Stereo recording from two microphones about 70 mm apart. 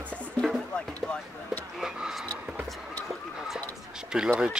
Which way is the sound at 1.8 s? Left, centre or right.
Centre.